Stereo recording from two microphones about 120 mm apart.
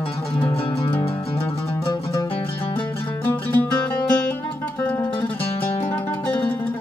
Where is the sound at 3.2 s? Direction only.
15° left (ahead or behind).